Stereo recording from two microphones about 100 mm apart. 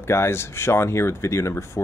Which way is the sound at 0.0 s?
25° left (ahead or behind).